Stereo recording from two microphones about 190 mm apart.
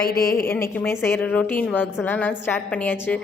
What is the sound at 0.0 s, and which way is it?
Speech, 50° left (ahead or behind).